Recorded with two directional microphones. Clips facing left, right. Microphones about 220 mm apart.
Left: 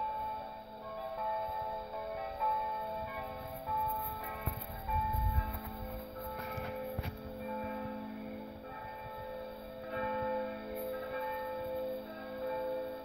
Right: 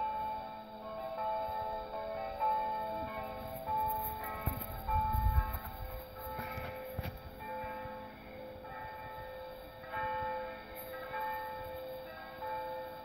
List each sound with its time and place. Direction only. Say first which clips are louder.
9.9 s music: left 4 dB; 35° left (ahead or behind)